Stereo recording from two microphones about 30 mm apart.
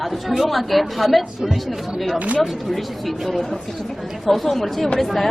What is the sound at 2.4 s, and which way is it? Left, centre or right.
A woman's voice, centre.